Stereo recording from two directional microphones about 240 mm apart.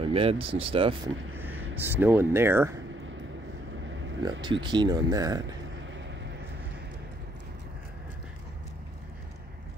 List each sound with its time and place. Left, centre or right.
0.0 s speech: right
1.3 s vehicle: centre
1.9 s speech: centre
4.2 s speech: centre